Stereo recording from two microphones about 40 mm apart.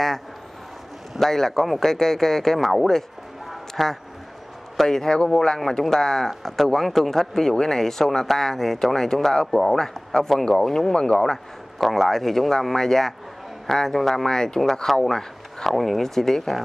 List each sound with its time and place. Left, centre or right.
1.2 s speech: centre
3.4 s a sound: centre
4.7 s speech: centre